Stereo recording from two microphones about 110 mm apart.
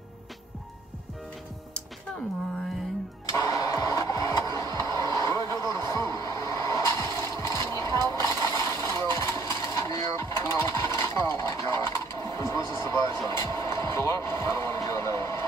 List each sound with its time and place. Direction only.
3.3 s vehicle: 30° left (ahead or behind)